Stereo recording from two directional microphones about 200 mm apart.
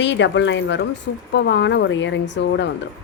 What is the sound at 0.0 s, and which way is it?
A woman's voice, 65° left (ahead or behind).